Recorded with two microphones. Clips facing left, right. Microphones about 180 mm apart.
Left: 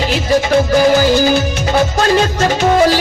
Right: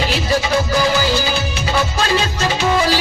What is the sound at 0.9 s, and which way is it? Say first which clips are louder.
Music: left 7 dB; 50° left (ahead or behind).